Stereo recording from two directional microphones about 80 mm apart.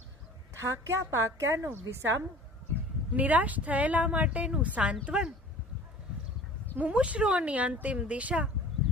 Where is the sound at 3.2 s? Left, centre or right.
Centre.